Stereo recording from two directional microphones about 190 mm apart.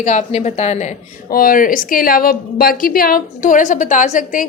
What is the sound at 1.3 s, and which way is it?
A woman's voice, 50° left (ahead or behind).